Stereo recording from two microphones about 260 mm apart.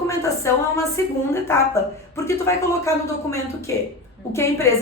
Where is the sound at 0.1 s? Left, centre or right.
Centre.